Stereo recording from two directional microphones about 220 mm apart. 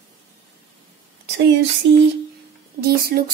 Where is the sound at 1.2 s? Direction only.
50° right (ahead or behind).